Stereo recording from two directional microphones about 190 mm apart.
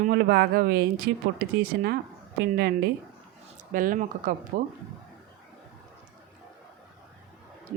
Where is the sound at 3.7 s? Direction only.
45° right (ahead or behind).